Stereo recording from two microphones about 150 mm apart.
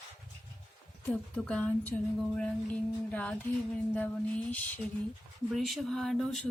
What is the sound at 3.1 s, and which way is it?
Speech, 10° left (ahead or behind).